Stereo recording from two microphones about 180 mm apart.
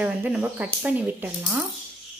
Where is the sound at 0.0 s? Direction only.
10° right (ahead or behind).